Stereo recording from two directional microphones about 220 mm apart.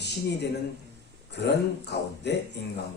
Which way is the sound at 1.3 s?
50° left (ahead or behind).